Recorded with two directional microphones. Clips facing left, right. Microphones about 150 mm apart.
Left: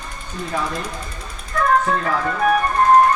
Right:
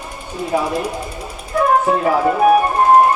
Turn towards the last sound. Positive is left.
turn(degrees=-20)  # may be behind; listen again after turning